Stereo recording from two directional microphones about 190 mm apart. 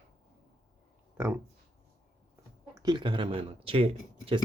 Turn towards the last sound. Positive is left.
turn(degrees=-30)  # may be behind; listen again after turning